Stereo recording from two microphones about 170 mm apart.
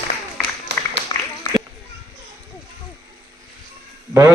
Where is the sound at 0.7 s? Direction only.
80° right.